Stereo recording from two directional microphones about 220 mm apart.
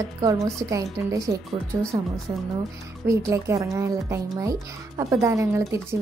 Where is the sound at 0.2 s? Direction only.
15° right (ahead or behind).